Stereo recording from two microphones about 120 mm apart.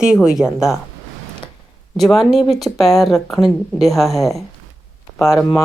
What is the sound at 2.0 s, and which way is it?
Speech, centre (ahead or behind).